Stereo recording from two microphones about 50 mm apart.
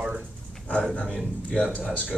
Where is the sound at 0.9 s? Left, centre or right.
Left.